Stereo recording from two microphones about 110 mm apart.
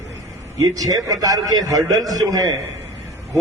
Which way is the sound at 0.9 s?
35° right (ahead or behind).